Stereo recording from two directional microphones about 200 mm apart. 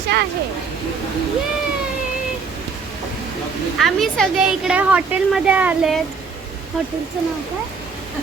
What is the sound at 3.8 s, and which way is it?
A woman's voice, centre (ahead or behind).